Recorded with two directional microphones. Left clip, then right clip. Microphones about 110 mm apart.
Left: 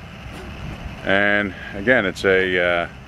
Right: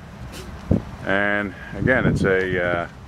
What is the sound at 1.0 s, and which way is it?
Speech, 15° left (ahead or behind).